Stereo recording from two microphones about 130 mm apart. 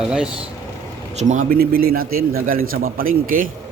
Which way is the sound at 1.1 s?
75° right (ahead or behind).